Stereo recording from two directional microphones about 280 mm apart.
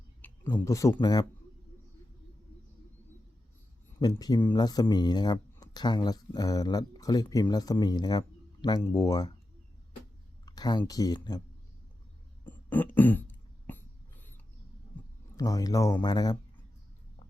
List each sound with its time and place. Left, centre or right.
0.2 s speech: centre
4.0 s speech: centre
10.4 s speech: centre
12.5 s throat clearing: centre
15.4 s speech: centre